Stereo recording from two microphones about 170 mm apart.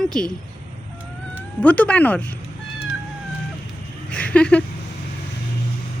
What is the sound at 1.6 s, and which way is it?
Speech, 10° left (ahead or behind).